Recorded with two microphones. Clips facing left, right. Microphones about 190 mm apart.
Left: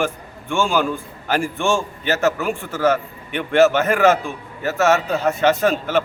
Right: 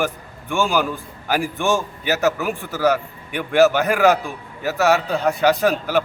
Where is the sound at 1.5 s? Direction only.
15° right (ahead or behind).